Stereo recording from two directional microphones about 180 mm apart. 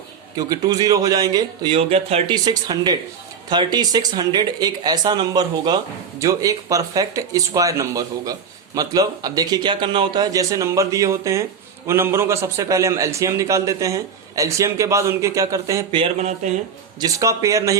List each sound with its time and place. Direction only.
0.3 s a man's voice: 20° right (ahead or behind)
16.0 s speech: 40° right (ahead or behind)
17.0 s a man's voice: 20° right (ahead or behind)